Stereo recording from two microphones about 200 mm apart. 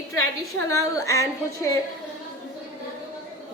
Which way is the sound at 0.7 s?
15° left (ahead or behind).